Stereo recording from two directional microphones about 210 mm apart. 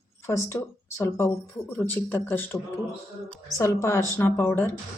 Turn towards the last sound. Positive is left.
turn(degrees=10)  # may be behind; listen again after turning